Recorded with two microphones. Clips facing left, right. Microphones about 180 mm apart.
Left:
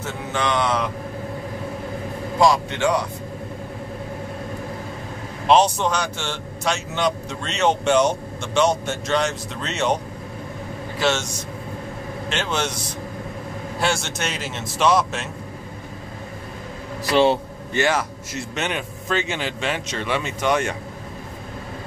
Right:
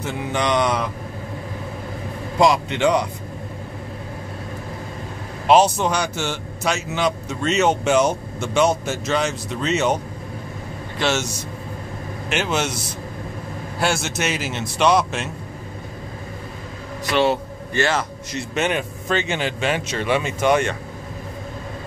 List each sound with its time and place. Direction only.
0.0 s mantra: 15° right (ahead or behind)
2.4 s a man's voice: 20° right (ahead or behind)
5.5 s a man's voice: 5° right (ahead or behind)
11.0 s speech: centre (ahead or behind)
12.3 s mantra: 10° right (ahead or behind)
13.7 s a man's voice: centre (ahead or behind)
17.1 s a man's voice: 30° left (ahead or behind)
17.7 s a man's voice: 10° left (ahead or behind)
18.5 s a man's voice: 5° right (ahead or behind)